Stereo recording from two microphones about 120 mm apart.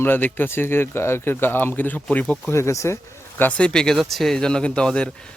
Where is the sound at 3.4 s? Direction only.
10° left (ahead or behind).